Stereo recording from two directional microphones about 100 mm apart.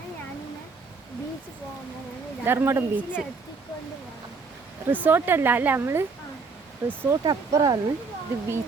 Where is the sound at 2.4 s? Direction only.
25° right (ahead or behind).